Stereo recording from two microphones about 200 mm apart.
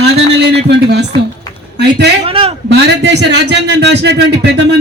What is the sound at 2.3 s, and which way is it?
Speech, 30° right (ahead or behind).